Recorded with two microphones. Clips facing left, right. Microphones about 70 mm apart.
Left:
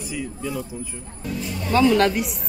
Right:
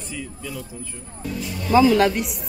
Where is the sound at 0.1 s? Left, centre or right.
Centre.